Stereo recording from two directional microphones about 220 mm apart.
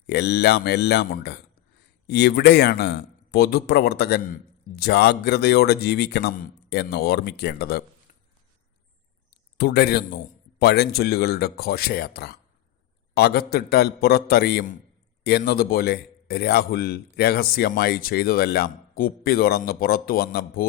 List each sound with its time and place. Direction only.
0.1 s a man's voice: 50° left (ahead or behind)
9.6 s a man's voice: 45° left (ahead or behind)